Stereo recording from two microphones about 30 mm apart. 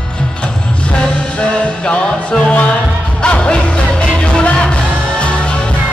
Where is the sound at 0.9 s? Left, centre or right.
Left.